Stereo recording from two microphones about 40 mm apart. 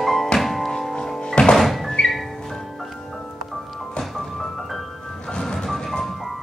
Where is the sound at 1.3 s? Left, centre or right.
Left.